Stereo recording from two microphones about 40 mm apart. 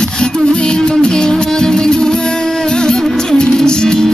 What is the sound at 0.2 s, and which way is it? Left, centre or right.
Music, centre.